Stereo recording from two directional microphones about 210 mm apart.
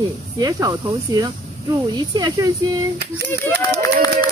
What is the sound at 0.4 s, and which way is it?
Speech, 15° right (ahead or behind).